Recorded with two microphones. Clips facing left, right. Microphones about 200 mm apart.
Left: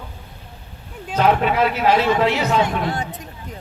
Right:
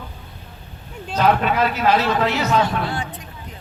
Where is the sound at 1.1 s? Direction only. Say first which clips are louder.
Left 1 dB; 15° left (ahead or behind).